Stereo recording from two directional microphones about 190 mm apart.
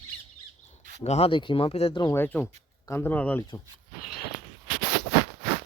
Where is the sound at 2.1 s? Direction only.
10° left (ahead or behind).